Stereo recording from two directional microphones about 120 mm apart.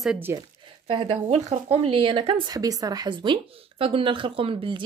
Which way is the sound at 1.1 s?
70° right (ahead or behind).